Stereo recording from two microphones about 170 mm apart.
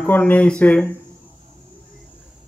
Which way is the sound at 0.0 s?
10° left (ahead or behind).